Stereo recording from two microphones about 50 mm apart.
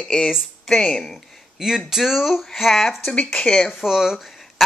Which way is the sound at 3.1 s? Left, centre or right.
Left.